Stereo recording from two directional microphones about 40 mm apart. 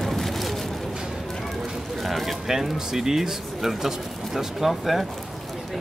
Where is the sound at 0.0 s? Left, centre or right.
Centre.